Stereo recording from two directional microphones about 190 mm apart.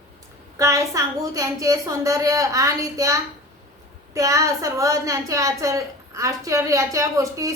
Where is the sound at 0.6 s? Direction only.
15° right (ahead or behind).